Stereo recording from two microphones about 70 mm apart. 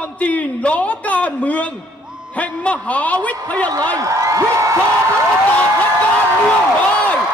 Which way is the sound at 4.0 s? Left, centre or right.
Right.